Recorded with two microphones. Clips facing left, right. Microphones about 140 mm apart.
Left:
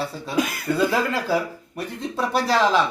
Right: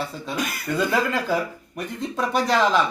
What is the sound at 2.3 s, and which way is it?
Speech, 35° left (ahead or behind).